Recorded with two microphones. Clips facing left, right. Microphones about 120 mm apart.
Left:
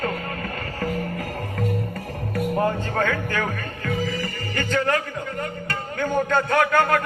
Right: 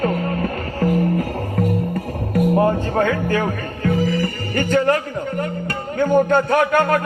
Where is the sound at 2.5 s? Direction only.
25° right (ahead or behind).